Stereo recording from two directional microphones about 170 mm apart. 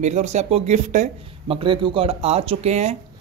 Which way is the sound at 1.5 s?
30° right (ahead or behind).